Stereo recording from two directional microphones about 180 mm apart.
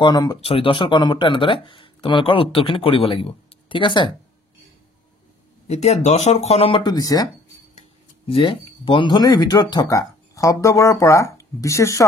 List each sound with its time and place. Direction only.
0.0 s speech: 25° left (ahead or behind)
5.7 s speech: 35° left (ahead or behind); by 7.2 s 20° left (ahead or behind)
8.3 s speech: 30° left (ahead or behind)